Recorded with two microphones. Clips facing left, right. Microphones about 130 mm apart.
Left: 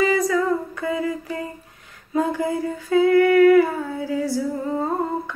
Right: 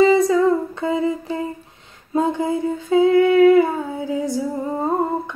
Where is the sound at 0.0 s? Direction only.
25° right (ahead or behind).